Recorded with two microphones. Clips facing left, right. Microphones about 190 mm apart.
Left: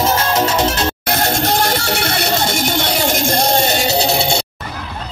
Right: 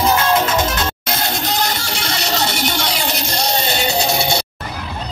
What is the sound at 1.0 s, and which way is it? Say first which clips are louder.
Music: left 5 dB; 50° left (ahead or behind).